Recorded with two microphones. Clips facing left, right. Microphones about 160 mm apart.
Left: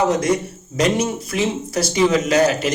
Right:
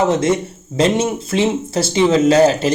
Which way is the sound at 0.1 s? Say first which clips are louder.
Right 2 dB; 25° right (ahead or behind).